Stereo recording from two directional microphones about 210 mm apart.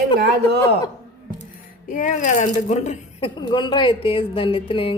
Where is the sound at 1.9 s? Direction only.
35° left (ahead or behind).